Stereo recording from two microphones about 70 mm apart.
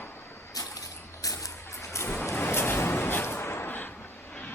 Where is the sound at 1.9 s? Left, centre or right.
Left.